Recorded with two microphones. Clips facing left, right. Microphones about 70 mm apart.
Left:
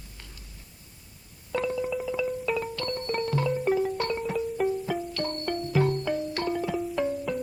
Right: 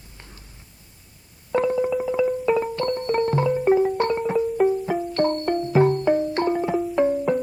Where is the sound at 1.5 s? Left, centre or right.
Right.